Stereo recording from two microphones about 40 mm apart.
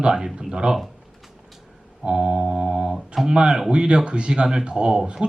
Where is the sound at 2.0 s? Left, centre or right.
Right.